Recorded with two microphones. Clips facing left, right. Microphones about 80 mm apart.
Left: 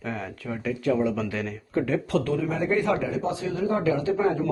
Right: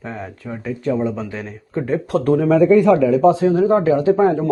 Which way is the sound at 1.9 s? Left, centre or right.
Right.